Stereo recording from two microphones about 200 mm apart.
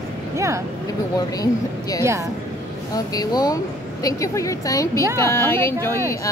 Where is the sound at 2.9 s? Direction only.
20° left (ahead or behind).